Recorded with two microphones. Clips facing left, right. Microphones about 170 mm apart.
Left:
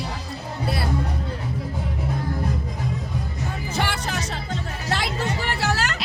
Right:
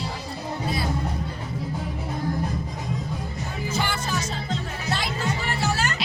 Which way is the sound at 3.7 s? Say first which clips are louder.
Even; 70° left (ahead or behind).